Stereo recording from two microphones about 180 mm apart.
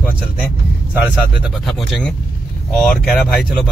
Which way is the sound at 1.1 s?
Centre (ahead or behind).